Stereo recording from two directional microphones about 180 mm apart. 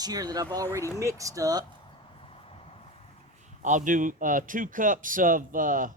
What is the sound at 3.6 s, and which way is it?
A man's voice, 45° right (ahead or behind).